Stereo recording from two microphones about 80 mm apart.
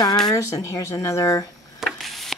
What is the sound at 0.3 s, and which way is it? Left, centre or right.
Speech, left.